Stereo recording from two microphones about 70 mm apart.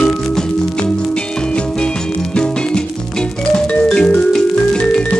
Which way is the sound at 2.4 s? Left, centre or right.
Centre.